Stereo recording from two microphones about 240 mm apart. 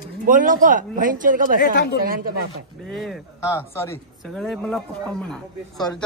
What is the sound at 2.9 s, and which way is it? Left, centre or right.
A man's voice, centre.